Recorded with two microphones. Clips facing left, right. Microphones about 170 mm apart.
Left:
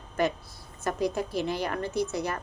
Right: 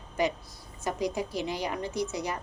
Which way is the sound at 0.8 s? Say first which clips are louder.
Left 2 dB; 15° right (ahead or behind).